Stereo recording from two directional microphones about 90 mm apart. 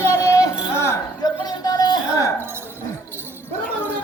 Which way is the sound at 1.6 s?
45° left (ahead or behind).